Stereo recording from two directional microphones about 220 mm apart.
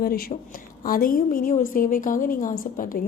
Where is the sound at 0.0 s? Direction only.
45° left (ahead or behind).